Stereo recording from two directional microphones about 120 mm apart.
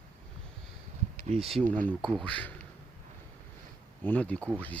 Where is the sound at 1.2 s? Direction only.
60° right (ahead or behind).